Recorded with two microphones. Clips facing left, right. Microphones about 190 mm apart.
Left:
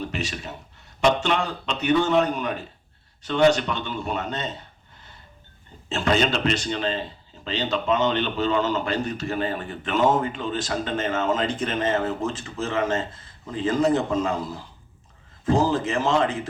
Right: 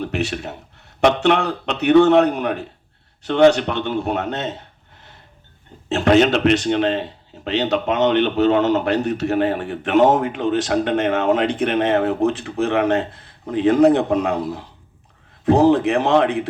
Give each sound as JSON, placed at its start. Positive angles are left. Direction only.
{"t": 0.0, "sound": "a man's voice", "side_deg": -65}